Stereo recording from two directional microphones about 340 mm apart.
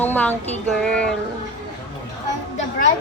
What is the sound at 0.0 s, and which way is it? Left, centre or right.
A woman's voice, centre.